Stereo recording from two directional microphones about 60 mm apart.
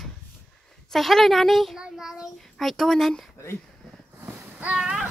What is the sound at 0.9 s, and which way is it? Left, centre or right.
Speech, centre.